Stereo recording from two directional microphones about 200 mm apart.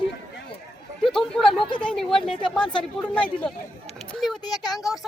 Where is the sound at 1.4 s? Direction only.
25° left (ahead or behind).